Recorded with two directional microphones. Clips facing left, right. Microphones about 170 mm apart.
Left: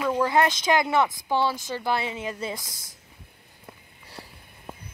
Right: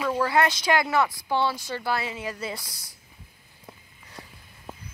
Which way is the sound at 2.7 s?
50° left (ahead or behind).